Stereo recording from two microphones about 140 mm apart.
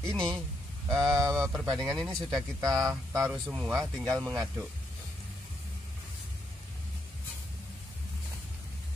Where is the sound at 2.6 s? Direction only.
25° right (ahead or behind).